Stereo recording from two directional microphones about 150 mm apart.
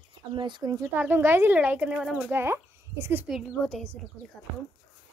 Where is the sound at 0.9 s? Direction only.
10° right (ahead or behind).